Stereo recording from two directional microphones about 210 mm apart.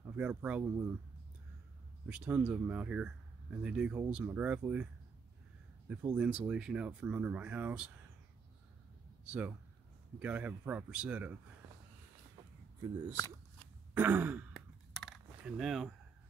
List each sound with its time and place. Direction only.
0.0 s speech: 5° right (ahead or behind)
2.0 s speech: 5° right (ahead or behind)
5.9 s speech: 5° right (ahead or behind)
9.2 s speech: 5° right (ahead or behind)
13.1 s a sound: 15° left (ahead or behind)
13.9 s sigh: 10° right (ahead or behind)